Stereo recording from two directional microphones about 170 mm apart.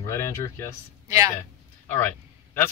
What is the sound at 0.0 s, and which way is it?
Speech, 15° left (ahead or behind).